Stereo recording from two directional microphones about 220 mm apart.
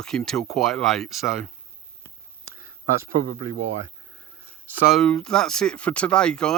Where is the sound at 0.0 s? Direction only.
5° left (ahead or behind).